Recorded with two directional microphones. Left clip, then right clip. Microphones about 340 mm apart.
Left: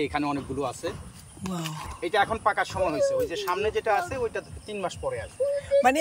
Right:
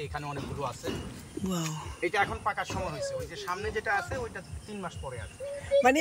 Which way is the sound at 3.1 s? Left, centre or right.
Left.